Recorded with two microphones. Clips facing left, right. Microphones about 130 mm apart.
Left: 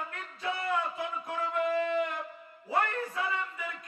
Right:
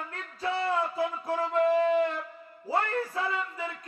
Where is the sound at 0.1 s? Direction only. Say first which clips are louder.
Right 4 dB; 30° right (ahead or behind).